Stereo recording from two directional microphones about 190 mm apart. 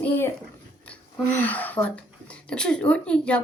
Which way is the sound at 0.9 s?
10° left (ahead or behind).